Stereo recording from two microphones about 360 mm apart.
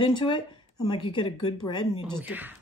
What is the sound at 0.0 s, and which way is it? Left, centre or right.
Speech, centre.